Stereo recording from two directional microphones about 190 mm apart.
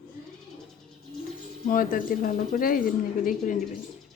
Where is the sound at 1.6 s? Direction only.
45° left (ahead or behind).